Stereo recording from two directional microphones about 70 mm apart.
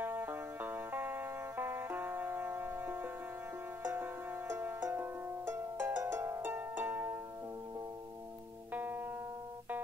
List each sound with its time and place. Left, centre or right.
0.0 s music: right
8.7 s music: right